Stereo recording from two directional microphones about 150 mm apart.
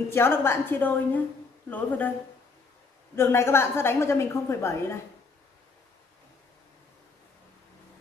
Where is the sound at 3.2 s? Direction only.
15° left (ahead or behind).